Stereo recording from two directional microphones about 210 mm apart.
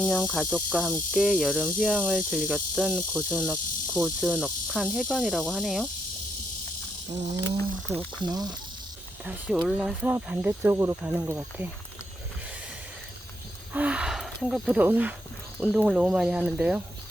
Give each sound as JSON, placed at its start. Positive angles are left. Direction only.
{"t": 0.0, "sound": "speech", "side_deg": 5}
{"t": 7.9, "sound": "cricket", "side_deg": -25}
{"t": 9.2, "sound": "speech", "side_deg": -5}
{"t": 13.7, "sound": "speech", "side_deg": -5}